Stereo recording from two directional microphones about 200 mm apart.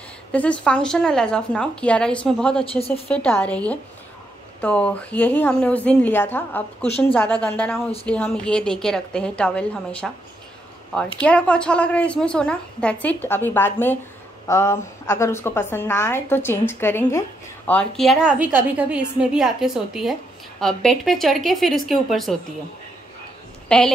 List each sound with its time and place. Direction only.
0.3 s a woman's voice: 5° left (ahead or behind)
2.6 s speech: 30° left (ahead or behind)
3.1 s a woman's voice: 10° left (ahead or behind)
11.1 s a woman's voice: 5° left (ahead or behind)
23.7 s a woman's voice: 5° left (ahead or behind)